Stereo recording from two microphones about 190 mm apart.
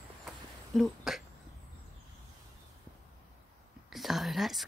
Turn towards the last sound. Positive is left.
turn(degrees=0)  # may be behind; listen again after turning